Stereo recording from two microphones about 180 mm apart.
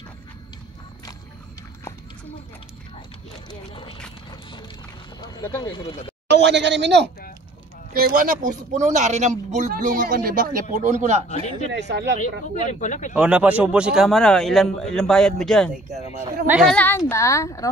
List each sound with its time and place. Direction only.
3.4 s speech: 30° left (ahead or behind)
4.3 s a sound: 25° left (ahead or behind)
5.6 s speech: 25° left (ahead or behind)
6.2 s speech: 70° right (ahead or behind)
7.9 s speech: 55° right (ahead or behind)
11.2 s speech: 40° left (ahead or behind)
11.7 s speech: 75° right (ahead or behind)
12.8 s speech: 45° left (ahead or behind)
13.1 s a man's voice: 5° right (ahead or behind); by 17.6 s 15° left (ahead or behind)